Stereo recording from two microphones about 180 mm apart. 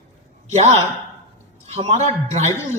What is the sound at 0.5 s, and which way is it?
A man's voice, 40° right (ahead or behind).